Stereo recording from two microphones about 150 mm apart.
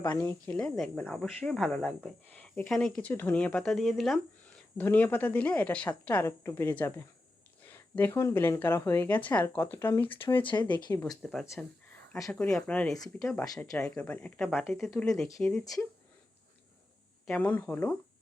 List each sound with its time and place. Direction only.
0.0 s a woman's voice: 30° left (ahead or behind)
0.3 s speech: 10° left (ahead or behind)
4.8 s a woman's voice: 10° left (ahead or behind)
10.4 s speech: 30° left (ahead or behind)
11.2 s a woman's voice: centre (ahead or behind)
17.2 s a woman's voice: 10° left (ahead or behind)